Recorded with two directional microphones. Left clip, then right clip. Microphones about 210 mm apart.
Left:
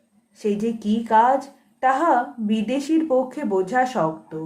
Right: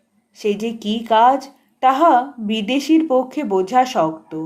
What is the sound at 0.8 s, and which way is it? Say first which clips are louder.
A woman's voice: right 3 dB; 30° right (ahead or behind).